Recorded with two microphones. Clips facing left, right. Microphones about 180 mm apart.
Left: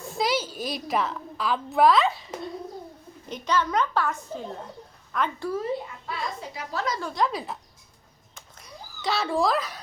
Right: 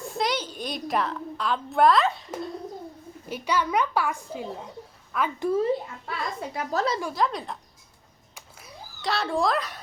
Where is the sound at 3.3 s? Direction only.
10° right (ahead or behind).